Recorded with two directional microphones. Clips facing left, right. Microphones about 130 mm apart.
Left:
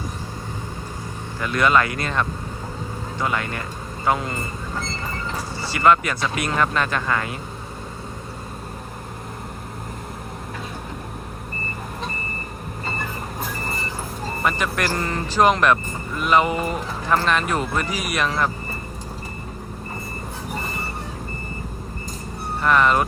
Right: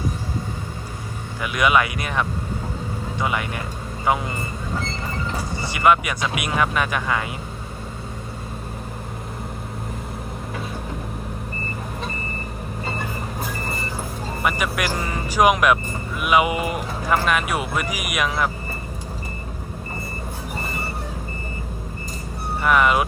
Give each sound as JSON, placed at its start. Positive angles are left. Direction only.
{"t": 1.4, "sound": "speech", "side_deg": -10}
{"t": 5.5, "sound": "speech", "side_deg": -15}
{"t": 13.4, "sound": "vehicle", "side_deg": 0}
{"t": 14.4, "sound": "speech", "side_deg": -10}
{"t": 22.6, "sound": "speech", "side_deg": -5}